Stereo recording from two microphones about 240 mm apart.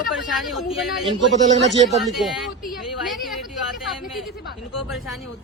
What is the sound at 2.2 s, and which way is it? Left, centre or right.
Speech, centre.